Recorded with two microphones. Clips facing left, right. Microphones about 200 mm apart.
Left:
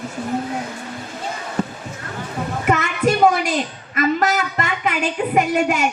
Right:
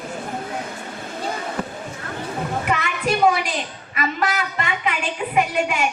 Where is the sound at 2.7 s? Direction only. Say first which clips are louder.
Left 7 dB; 45° left (ahead or behind).